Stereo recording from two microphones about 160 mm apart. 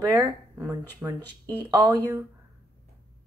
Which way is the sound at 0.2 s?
20° right (ahead or behind).